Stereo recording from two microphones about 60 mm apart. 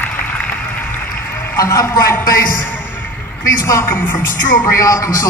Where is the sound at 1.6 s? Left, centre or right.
Left.